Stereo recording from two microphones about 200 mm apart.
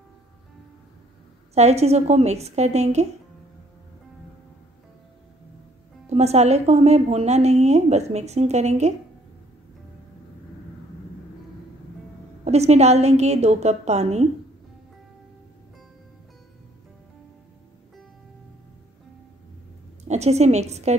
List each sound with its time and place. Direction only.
1.5 s a woman's voice: 30° right (ahead or behind)
6.0 s a woman's voice: 30° right (ahead or behind)
12.4 s a woman's voice: 30° right (ahead or behind)
20.1 s a woman's voice: 35° right (ahead or behind)